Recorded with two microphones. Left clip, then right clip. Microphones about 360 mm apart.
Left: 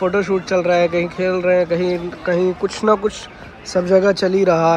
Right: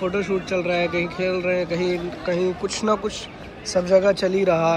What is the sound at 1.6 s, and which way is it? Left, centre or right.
Speech, centre.